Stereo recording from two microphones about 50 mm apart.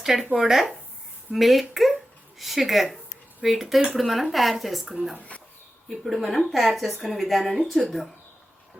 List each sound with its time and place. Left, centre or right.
0.0 s a woman's voice: centre
5.3 s a sound: left
5.9 s speech: centre